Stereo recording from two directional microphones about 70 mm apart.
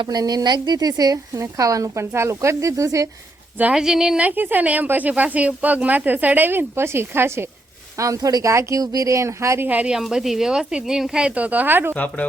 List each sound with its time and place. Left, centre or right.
0.1 s speech: right
3.8 s a woman's voice: centre
4.2 s speech: right
7.9 s speech: right
8.8 s speech: right
9.6 s speech: right
9.9 s a woman's voice: centre; by 11.9 s right
11.9 s speech: left